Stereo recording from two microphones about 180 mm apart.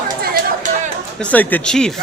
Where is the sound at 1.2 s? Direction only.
10° left (ahead or behind).